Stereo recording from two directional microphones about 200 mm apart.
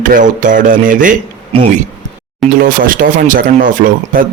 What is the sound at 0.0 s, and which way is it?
Speech, 40° right (ahead or behind).